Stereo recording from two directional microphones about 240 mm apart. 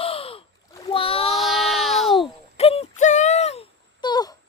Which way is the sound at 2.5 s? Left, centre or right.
Left.